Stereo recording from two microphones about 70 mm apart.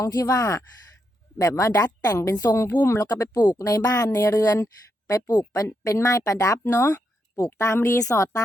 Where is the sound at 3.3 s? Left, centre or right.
Left.